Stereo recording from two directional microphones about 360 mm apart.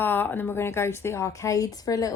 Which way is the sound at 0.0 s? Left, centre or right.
Centre.